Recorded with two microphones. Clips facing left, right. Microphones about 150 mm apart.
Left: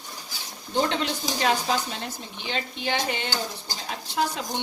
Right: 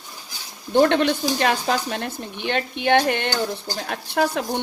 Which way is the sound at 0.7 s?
60° right (ahead or behind).